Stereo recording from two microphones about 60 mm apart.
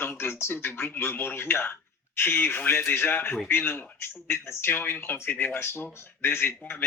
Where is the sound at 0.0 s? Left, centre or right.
Left.